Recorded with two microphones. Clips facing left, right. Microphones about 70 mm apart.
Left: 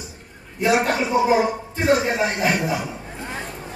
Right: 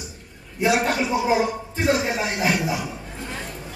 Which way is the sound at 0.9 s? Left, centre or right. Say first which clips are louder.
Left 3 dB; left.